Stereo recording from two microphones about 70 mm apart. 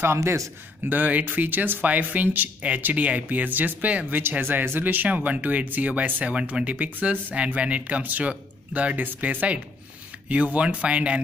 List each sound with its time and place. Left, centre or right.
0.0 s a man's voice: right
0.8 s speech: right
4.2 s speech: right